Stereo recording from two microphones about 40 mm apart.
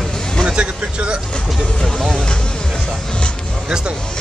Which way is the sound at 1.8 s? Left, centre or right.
Centre.